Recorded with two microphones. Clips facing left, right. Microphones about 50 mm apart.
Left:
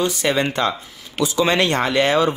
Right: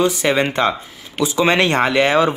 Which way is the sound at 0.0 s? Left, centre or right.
Right.